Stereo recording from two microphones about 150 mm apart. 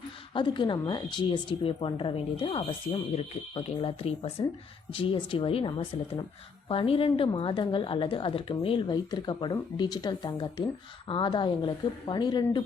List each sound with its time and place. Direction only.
0.3 s a woman's voice: 30° left (ahead or behind)